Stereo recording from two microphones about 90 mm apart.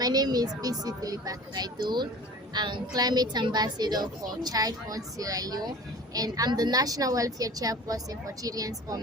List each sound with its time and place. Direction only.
0.0 s a woman's voice: 45° right (ahead or behind)